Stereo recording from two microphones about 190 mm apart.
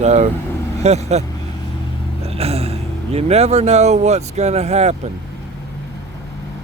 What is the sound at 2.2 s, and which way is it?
Speech, 30° right (ahead or behind).